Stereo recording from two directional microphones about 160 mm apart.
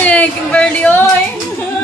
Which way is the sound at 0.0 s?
10° left (ahead or behind).